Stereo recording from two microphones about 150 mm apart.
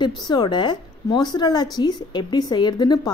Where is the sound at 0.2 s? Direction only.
30° left (ahead or behind).